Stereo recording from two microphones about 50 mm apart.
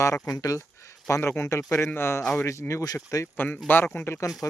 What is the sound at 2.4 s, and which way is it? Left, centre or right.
Speech, left.